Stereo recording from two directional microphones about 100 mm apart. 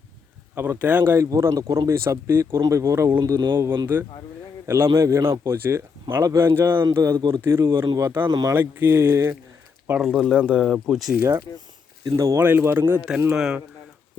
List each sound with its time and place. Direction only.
0.5 s speech: 20° right (ahead or behind)
3.2 s speech: 45° right (ahead or behind)
3.9 s a man's voice: 20° right (ahead or behind)
10.0 s speech: 5° left (ahead or behind)
11.2 s speech: 30° right (ahead or behind)
12.4 s speech: 20° right (ahead or behind)
13.3 s speech: 5° right (ahead or behind)